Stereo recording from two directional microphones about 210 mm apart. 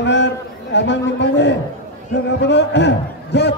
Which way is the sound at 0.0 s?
55° left (ahead or behind).